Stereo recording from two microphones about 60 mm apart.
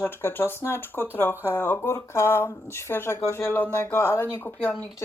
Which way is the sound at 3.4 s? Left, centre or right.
Left.